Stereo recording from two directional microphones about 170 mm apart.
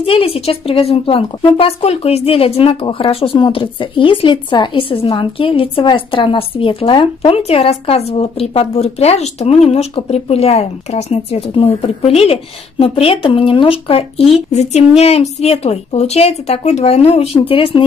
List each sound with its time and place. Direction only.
0.0 s a woman's voice: 35° left (ahead or behind)